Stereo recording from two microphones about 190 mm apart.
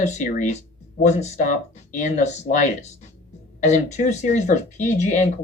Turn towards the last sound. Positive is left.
turn(degrees=40)  # may be behind; listen again after turning